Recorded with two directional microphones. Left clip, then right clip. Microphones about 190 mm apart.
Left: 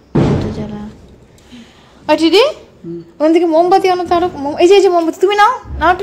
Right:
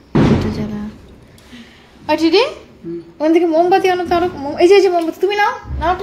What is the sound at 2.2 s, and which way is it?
Speech, 30° left (ahead or behind).